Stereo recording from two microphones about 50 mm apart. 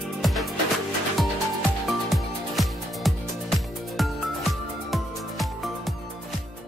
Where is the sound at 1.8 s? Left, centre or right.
Centre.